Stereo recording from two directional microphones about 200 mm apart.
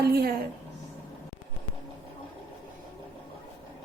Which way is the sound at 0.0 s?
50° right (ahead or behind).